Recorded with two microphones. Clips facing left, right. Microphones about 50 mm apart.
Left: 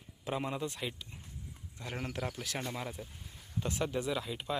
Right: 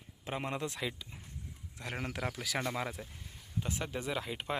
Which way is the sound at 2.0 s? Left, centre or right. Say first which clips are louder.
Even; right.